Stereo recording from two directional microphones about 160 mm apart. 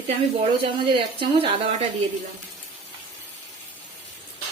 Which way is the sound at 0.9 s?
30° right (ahead or behind).